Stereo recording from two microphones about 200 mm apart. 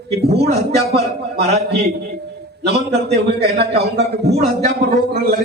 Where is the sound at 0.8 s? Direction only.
55° right (ahead or behind).